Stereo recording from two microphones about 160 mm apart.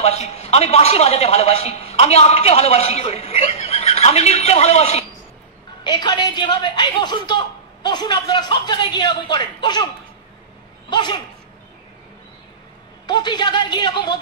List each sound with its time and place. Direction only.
0.0 s a man's voice: 40° left (ahead or behind)
5.9 s a woman's voice: 25° left (ahead or behind)
10.9 s a woman's voice: 25° left (ahead or behind)
13.0 s a woman's voice: 25° left (ahead or behind)